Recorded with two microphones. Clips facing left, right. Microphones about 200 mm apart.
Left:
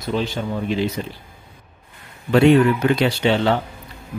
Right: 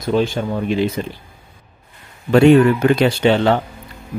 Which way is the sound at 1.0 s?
65° right (ahead or behind).